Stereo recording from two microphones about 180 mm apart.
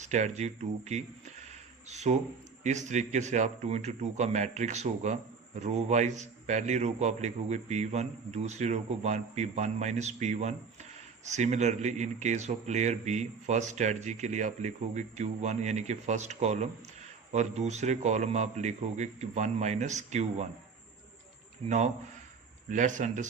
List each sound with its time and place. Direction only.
0.0 s speech: 40° right (ahead or behind)
22.7 s speech: 45° right (ahead or behind)